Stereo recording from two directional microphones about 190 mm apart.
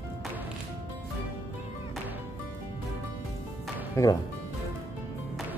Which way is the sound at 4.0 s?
15° left (ahead or behind).